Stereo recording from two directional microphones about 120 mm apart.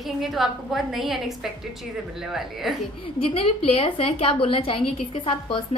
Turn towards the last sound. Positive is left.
turn(degrees=45)  # may be behind; listen again after turning